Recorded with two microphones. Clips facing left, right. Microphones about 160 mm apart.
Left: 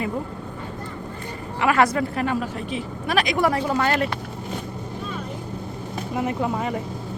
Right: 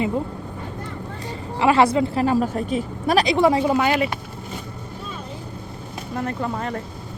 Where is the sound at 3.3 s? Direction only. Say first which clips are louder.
Right 4 dB; 20° right (ahead or behind).